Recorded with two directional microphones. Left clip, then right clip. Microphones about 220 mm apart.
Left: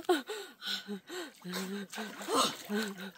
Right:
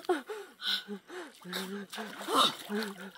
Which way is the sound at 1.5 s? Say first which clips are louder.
Right 3 dB; 40° left (ahead or behind).